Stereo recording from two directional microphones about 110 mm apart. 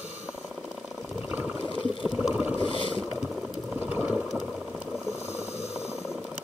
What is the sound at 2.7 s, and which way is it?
Boat, 50° left (ahead or behind).